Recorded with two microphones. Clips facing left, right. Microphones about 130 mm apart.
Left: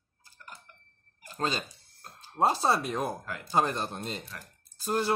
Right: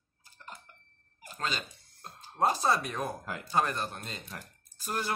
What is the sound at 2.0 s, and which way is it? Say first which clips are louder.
Music: right 2 dB; 25° right (ahead or behind).